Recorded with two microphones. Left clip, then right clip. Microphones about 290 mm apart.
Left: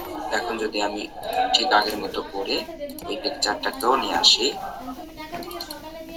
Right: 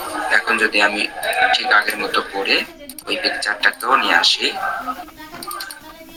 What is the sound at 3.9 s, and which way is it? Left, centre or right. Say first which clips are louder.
Speech: right 2 dB; right.